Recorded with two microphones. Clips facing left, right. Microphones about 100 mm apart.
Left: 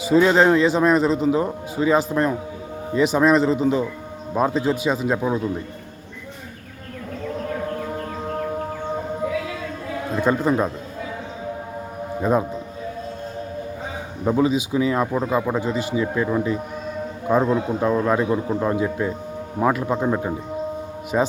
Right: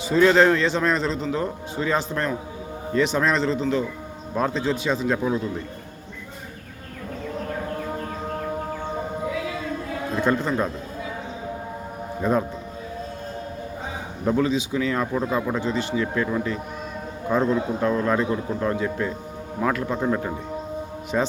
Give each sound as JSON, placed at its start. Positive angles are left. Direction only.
{"t": 0.1, "sound": "a man's voice", "side_deg": 10}
{"t": 10.2, "sound": "a man's voice", "side_deg": 5}
{"t": 12.2, "sound": "a man's voice", "side_deg": 10}
{"t": 14.3, "sound": "a man's voice", "side_deg": 15}